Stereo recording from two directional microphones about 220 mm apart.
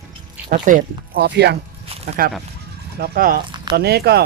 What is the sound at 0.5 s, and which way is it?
Speech, 35° right (ahead or behind).